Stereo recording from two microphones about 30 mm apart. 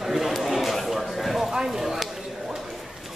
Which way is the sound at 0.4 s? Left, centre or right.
Centre.